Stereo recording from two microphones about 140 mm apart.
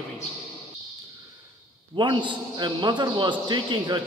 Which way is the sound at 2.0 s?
35° right (ahead or behind).